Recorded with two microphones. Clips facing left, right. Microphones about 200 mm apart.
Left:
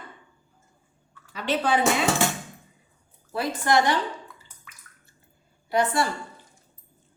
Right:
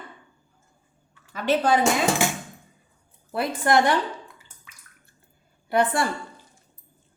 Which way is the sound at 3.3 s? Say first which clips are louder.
Right 2 dB; 55° right (ahead or behind).